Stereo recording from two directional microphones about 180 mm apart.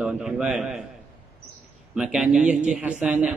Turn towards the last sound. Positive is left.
turn(degrees=-5)  # may be behind; listen again after turning